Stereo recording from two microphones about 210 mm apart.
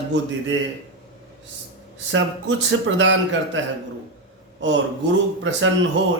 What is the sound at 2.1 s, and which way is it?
A man's voice, 65° right (ahead or behind).